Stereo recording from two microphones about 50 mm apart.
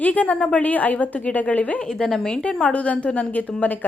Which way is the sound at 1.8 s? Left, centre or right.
Centre.